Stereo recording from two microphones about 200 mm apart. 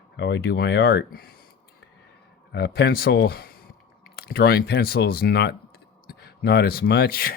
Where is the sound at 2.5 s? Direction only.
55° left (ahead or behind).